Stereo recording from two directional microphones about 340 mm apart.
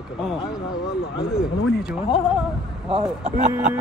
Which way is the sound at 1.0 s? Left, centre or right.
Centre.